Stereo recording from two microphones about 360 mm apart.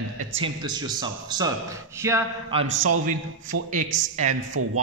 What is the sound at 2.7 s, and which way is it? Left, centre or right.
Speech, right.